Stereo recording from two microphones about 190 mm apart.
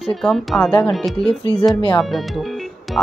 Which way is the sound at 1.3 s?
30° left (ahead or behind).